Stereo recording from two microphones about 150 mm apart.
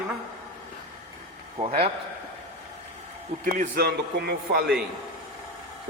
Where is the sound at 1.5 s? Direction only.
45° right (ahead or behind).